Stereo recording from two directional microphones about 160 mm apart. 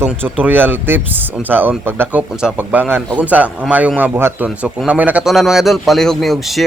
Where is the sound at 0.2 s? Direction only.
10° right (ahead or behind).